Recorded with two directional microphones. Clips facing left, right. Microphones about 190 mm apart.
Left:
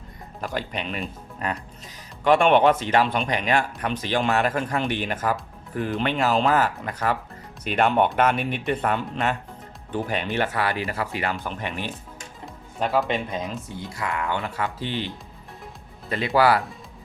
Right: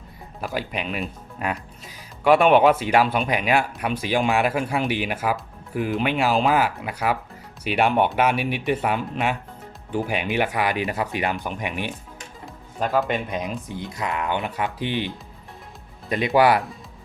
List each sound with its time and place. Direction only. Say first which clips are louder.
0.4 s speech: right 1 dB; 5° right (ahead or behind)
13.3 s speech: right 2 dB; 15° right (ahead or behind)